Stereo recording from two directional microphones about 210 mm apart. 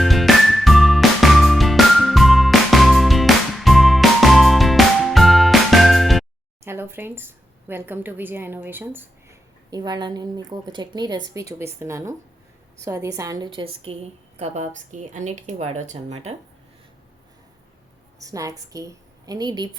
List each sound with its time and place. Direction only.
0.0 s music: centre (ahead or behind)
6.7 s a woman's voice: 10° right (ahead or behind); by 16.3 s 30° right (ahead or behind)
18.2 s a woman's voice: 15° right (ahead or behind)